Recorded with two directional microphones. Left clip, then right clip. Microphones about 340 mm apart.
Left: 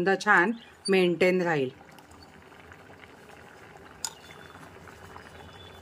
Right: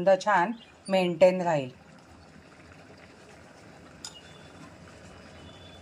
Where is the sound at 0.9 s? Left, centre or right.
Left.